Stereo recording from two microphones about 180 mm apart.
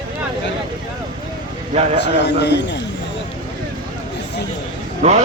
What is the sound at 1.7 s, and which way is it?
Speech, 40° right (ahead or behind).